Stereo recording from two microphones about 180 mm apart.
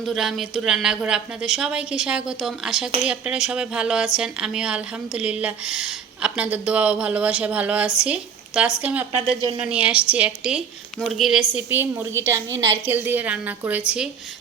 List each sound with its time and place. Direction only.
0.0 s a woman's voice: centre (ahead or behind)